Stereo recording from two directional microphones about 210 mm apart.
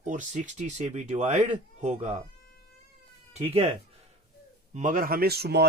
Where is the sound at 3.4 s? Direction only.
25° right (ahead or behind).